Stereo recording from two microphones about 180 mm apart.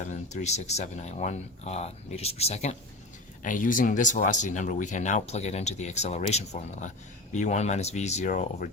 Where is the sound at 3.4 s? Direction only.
45° left (ahead or behind).